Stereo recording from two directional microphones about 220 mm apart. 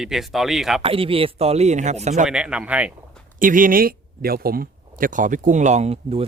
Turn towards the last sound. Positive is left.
turn(degrees=-30)  # may be behind; listen again after turning